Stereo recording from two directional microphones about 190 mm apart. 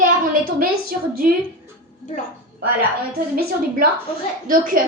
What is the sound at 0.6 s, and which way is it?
Speech, 50° right (ahead or behind).